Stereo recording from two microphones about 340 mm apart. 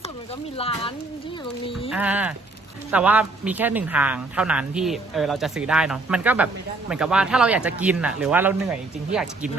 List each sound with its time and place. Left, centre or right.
0.5 s speech: centre
1.9 s speech: centre